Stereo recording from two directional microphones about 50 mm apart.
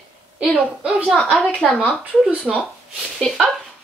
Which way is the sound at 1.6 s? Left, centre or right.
Centre.